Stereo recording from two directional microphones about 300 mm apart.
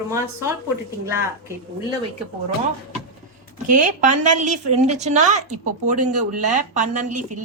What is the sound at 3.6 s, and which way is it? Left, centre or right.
A woman's voice, right.